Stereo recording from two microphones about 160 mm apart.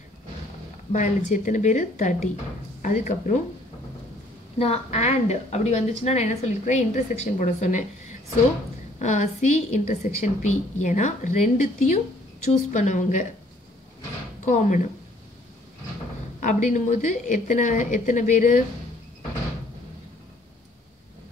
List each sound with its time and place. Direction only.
0.9 s a woman's voice: 50° left (ahead or behind)
4.6 s a woman's voice: 40° left (ahead or behind)
14.4 s speech: 50° left (ahead or behind)
16.3 s a woman's voice: 50° left (ahead or behind)